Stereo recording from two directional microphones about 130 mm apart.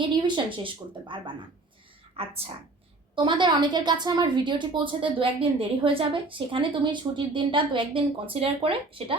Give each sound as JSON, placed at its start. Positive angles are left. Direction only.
{"t": 0.3, "sound": "a woman's voice", "side_deg": -40}
{"t": 2.1, "sound": "speech", "side_deg": -50}
{"t": 3.2, "sound": "a woman's voice", "side_deg": -35}